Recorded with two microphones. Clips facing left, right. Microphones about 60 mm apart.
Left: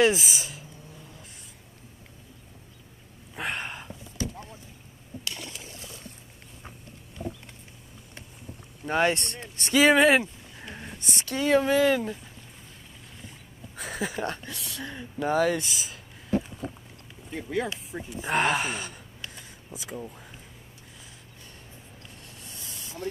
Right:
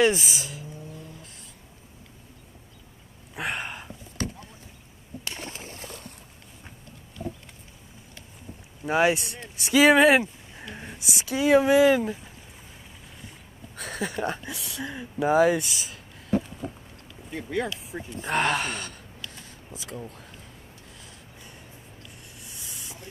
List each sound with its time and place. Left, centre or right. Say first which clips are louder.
0.0 s speech: even; centre
3.3 s a sound: right 1 dB; centre
5.2 s boat: right 2 dB; right
8.8 s speech: right 2 dB; centre
13.3 s speech: even; centre
15.6 s speech: even; centre
17.3 s speech: right 1 dB; centre
19.3 s a sound: even; centre
22.4 s a sound: even; centre